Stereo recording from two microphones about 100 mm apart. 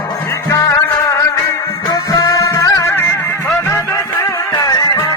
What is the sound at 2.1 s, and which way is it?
Music, 35° left (ahead or behind).